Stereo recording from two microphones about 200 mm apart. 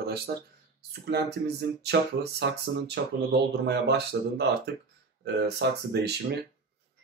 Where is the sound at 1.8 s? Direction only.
55° right (ahead or behind).